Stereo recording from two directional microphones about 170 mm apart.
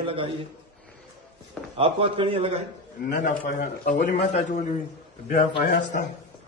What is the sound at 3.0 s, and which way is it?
A man's voice, 50° left (ahead or behind).